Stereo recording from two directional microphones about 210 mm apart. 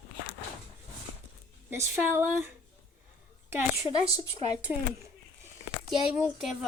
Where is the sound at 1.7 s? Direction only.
10° right (ahead or behind).